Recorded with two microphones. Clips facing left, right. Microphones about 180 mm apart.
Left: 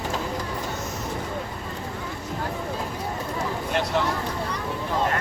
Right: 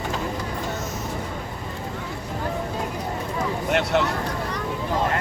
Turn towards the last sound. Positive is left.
turn(degrees=-65)  # may be behind; listen again after turning